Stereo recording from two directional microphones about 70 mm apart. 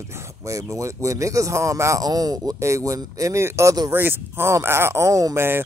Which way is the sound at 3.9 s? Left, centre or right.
Right.